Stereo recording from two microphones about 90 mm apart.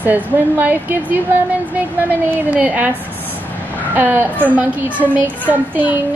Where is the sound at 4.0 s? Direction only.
25° right (ahead or behind).